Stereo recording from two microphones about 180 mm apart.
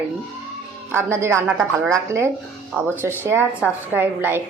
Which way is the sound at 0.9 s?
15° right (ahead or behind).